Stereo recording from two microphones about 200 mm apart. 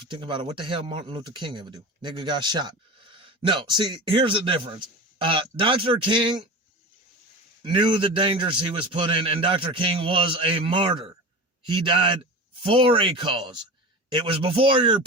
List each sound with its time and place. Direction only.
0.1 s speech: 25° right (ahead or behind)
7.6 s speech: 25° right (ahead or behind)